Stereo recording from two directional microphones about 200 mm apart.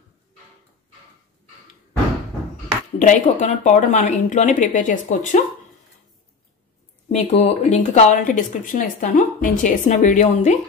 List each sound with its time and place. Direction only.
3.0 s speech: 35° left (ahead or behind)
7.1 s speech: 35° left (ahead or behind)